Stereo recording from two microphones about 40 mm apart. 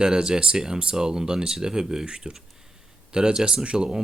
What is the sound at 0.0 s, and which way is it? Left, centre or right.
Speech, centre.